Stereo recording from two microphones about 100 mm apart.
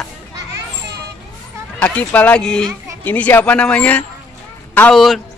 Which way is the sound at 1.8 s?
15° left (ahead or behind).